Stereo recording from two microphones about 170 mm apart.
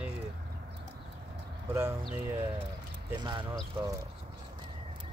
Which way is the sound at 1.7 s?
15° right (ahead or behind).